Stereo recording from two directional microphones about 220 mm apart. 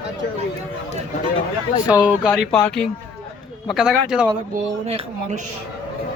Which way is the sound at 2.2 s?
5° left (ahead or behind).